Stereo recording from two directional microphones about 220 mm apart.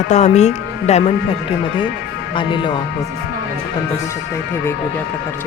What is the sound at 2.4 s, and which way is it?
Speech, 20° left (ahead or behind).